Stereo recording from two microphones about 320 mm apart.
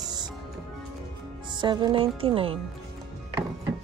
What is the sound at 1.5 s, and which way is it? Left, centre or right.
Speech, centre.